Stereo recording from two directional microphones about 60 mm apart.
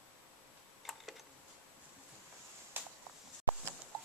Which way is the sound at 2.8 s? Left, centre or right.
Right.